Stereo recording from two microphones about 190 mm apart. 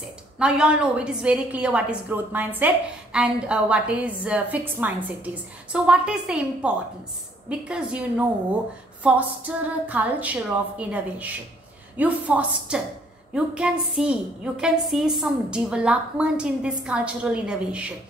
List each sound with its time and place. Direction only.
0.4 s a woman's voice: 5° right (ahead or behind)